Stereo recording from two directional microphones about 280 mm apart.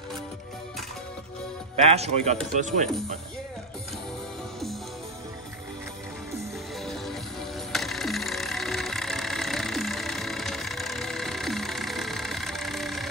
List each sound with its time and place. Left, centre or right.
1.9 s speech: right
7.7 s vehicle: centre